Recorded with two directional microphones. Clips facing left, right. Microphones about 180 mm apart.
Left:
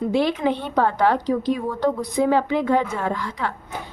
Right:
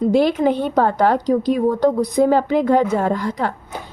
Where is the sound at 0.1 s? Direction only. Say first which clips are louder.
Right 4 dB; 40° right (ahead or behind).